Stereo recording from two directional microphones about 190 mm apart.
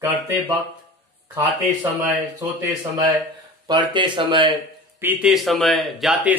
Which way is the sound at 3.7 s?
25° right (ahead or behind).